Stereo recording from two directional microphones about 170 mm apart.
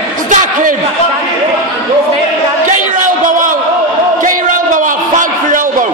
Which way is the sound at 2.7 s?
50° right (ahead or behind).